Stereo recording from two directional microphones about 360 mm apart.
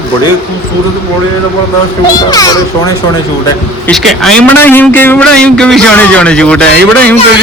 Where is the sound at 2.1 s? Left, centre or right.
Centre.